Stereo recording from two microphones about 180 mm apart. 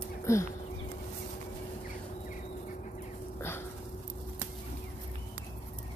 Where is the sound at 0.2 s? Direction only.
15° left (ahead or behind).